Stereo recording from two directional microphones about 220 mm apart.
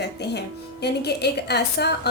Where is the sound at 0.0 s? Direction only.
50° left (ahead or behind).